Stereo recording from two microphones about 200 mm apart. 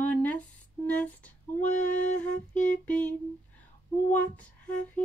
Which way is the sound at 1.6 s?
40° left (ahead or behind).